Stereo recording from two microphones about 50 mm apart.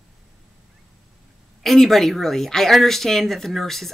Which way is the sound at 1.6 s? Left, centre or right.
Centre.